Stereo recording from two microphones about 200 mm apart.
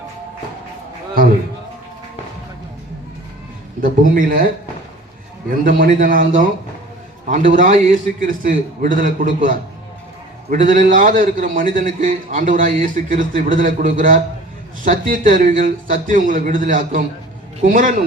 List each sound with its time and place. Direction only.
3.8 s speech: 45° right (ahead or behind)
5.6 s a man's voice: 40° right (ahead or behind)